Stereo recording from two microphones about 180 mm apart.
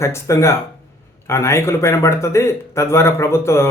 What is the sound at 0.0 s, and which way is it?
A man's voice, 15° left (ahead or behind).